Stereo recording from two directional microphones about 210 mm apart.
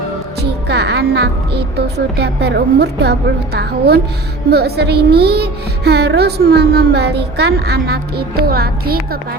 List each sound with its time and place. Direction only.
0.7 s a woman's voice: 50° right (ahead or behind)